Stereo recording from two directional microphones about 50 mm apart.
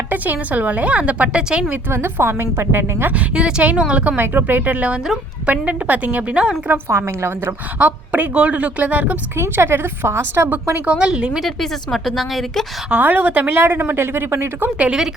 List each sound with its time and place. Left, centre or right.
0.1 s a woman's voice: right; by 1.6 s centre
1.9 s a woman's voice: right
3.1 s a woman's voice: right
4.2 s a woman's voice: right
6.8 s a woman's voice: right
7.8 s a woman's voice: right
9.4 s a woman's voice: right
10.5 s a woman's voice: right
10.9 s a woman's voice: centre
11.3 s a woman's voice: centre
12.9 s a woman's voice: right
13.5 s a woman's voice: right